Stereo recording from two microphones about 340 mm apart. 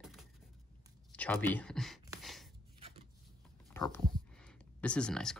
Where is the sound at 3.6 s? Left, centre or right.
Centre.